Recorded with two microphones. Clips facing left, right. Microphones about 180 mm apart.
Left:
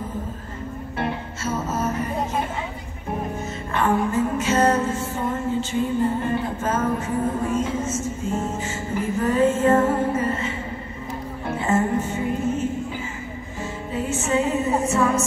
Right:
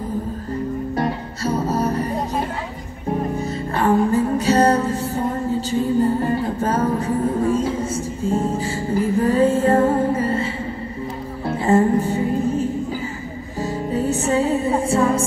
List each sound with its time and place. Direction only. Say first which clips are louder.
0.9 s music: right 4 dB; 40° right (ahead or behind)
3.3 s music: right 3 dB; 35° right (ahead or behind)
11.6 s music: right 6 dB; 35° right (ahead or behind)
14.9 s a sound: right 4 dB; 30° right (ahead or behind)